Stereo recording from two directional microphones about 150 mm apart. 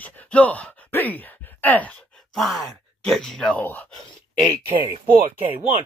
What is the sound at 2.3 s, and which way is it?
Speech, centre (ahead or behind).